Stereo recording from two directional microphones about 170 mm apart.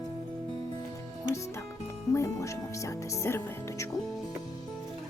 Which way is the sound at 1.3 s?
15° left (ahead or behind).